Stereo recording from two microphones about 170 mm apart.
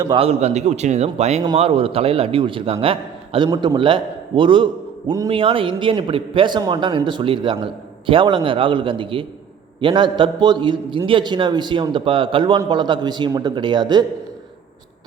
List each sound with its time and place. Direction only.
0.0 s a man's voice: 30° right (ahead or behind)